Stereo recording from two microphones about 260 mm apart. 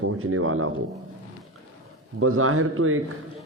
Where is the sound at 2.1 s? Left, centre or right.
Right.